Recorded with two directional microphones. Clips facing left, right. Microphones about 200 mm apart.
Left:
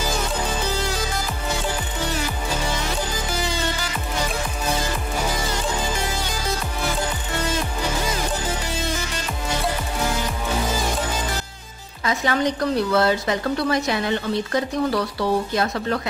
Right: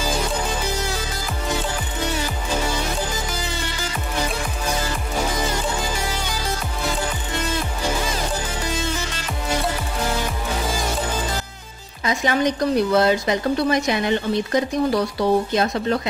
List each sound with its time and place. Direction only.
12.0 s a woman's voice: 15° right (ahead or behind)